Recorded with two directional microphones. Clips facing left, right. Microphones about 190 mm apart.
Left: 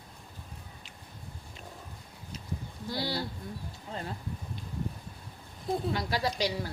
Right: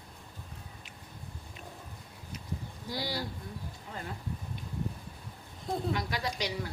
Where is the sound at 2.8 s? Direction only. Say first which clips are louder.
Left 3 dB; 15° right (ahead or behind).